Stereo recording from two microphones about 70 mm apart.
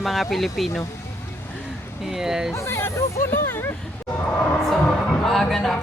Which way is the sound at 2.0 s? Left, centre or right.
Centre.